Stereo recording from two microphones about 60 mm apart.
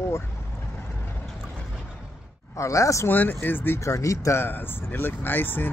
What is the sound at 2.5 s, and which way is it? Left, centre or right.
Speech, left.